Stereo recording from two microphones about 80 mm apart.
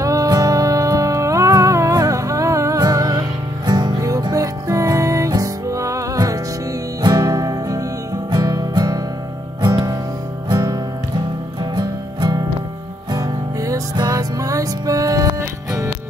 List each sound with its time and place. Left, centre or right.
0.0 s music: right
3.6 s music: right
4.2 s music: right
7.0 s music: right
11.7 s music: right
13.1 s music: right